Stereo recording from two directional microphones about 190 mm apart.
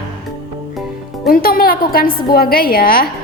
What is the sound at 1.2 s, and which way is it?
A woman's voice, 50° left (ahead or behind).